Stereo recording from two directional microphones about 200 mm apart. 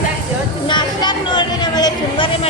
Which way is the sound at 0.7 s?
20° left (ahead or behind).